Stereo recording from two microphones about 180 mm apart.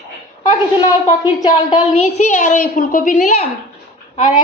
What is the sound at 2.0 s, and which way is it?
A woman's voice, 40° left (ahead or behind).